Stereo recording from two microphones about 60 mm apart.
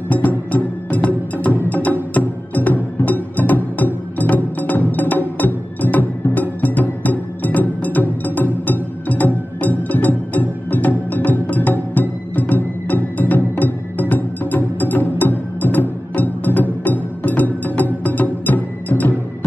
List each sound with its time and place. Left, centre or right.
0.1 s music: left